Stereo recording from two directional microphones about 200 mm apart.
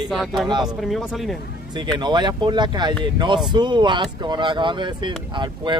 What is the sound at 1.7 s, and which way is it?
Speech, 20° right (ahead or behind).